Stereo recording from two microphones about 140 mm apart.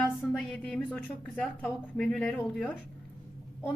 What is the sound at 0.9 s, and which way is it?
A woman's voice, 10° left (ahead or behind).